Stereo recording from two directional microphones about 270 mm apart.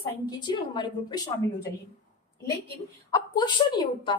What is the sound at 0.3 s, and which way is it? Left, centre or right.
Speech, centre.